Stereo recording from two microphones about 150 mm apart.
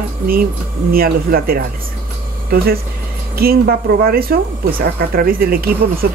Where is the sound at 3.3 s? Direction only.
90° right.